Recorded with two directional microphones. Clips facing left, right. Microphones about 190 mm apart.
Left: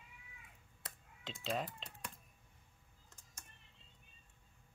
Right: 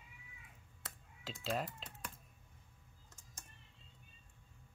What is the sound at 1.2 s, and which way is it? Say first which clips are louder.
Speech: right 1 dB; centre (ahead or behind).